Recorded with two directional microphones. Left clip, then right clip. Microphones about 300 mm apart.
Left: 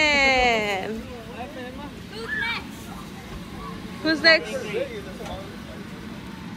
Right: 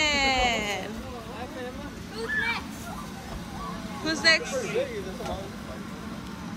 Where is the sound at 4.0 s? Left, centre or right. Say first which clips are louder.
Left 5 dB; centre.